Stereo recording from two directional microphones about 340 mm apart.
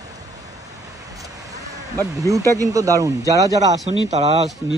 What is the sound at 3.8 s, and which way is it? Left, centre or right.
Speech, left.